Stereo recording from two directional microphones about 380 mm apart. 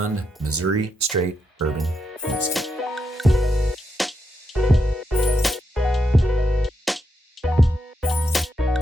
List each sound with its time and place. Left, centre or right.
0.0 s speech: right
1.8 s music: centre